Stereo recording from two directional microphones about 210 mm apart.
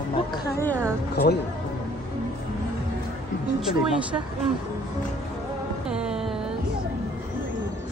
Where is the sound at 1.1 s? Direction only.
50° left (ahead or behind).